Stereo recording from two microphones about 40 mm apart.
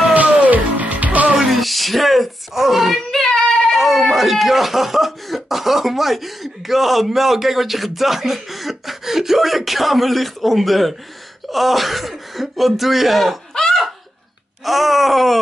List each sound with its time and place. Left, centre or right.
0.1 s music: right
1.3 s a sound: centre
3.1 s child singing: centre
3.7 s speech: centre
13.5 s laughter: centre
14.6 s speech: centre